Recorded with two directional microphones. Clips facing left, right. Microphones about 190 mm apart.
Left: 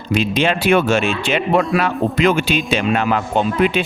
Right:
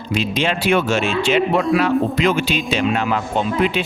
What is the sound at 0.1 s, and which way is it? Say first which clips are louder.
A man's voice: left 3 dB; 55° left (ahead or behind).